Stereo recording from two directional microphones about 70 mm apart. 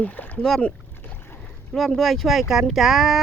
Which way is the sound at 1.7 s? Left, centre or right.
Centre.